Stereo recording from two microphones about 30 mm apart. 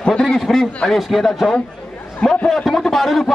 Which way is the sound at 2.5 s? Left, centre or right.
Centre.